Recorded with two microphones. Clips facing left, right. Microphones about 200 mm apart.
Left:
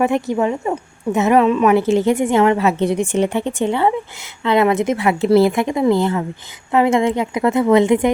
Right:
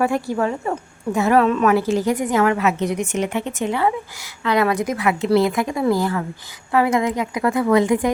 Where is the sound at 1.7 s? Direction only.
25° left (ahead or behind).